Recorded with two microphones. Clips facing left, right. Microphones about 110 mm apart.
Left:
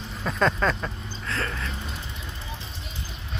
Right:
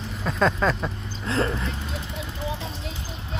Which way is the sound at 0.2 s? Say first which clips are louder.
Right 1 dB; centre (ahead or behind).